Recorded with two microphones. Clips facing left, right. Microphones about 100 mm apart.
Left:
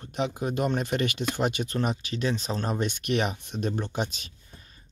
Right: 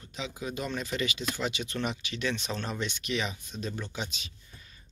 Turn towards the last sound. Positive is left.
turn(degrees=35)  # may be behind; listen again after turning